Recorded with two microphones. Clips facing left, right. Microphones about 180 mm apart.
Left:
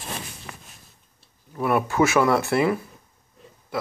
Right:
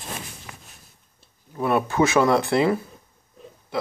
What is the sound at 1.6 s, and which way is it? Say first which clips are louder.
Speech: even; 25° right (ahead or behind).